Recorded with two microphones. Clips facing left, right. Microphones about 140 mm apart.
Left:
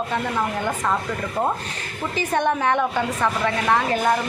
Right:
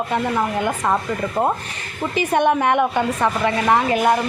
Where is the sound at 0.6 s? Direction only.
25° right (ahead or behind).